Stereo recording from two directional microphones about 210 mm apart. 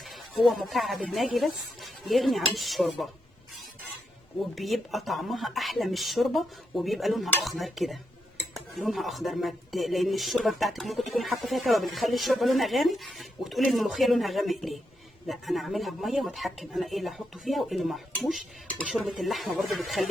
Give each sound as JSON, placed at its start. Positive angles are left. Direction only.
{"t": 0.0, "sound": "speech", "side_deg": 0}
{"t": 4.5, "sound": "speech", "side_deg": 0}